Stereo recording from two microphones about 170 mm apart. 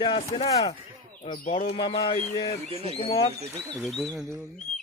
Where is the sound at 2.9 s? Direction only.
30° left (ahead or behind).